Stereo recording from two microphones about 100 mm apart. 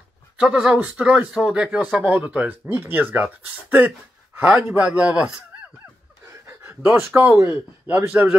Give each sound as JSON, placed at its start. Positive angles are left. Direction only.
{"t": 0.4, "sound": "speech", "side_deg": -10}
{"t": 4.4, "sound": "a man's voice", "side_deg": -20}
{"t": 6.4, "sound": "speech", "side_deg": -25}